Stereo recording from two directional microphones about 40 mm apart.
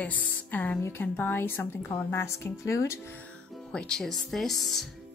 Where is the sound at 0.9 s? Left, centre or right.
Left.